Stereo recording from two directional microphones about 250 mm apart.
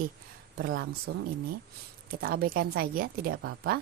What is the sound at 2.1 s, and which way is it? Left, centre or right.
Speech, right.